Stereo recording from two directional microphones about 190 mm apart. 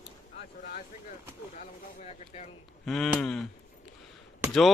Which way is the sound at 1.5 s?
40° left (ahead or behind).